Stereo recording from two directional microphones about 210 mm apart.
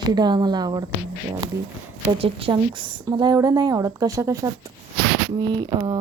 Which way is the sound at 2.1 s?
25° right (ahead or behind).